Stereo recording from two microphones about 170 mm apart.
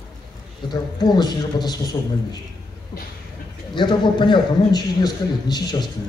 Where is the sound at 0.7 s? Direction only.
25° left (ahead or behind).